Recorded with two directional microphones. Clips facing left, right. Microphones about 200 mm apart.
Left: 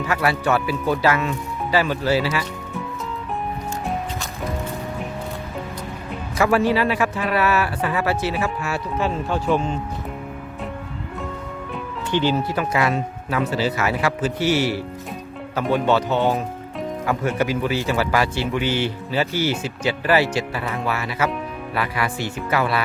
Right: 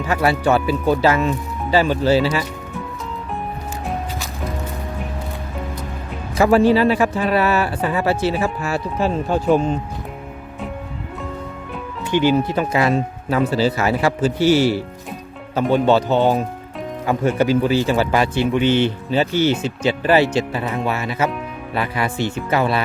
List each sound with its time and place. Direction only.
0.1 s a man's voice: 30° right (ahead or behind)
6.3 s a man's voice: 30° right (ahead or behind)
12.1 s a man's voice: 10° right (ahead or behind)